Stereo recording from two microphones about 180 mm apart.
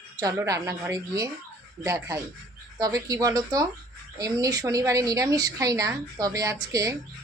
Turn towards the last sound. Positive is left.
turn(degrees=-20)  # may be behind; listen again after turning